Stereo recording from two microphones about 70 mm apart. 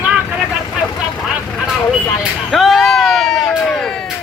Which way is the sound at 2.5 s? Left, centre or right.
Centre.